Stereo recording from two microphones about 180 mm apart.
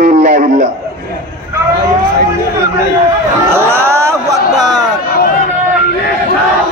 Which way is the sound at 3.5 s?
15° right (ahead or behind).